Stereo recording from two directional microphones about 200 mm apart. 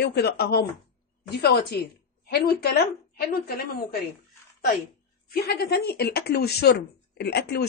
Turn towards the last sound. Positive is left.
turn(degrees=55)  # may be behind; listen again after turning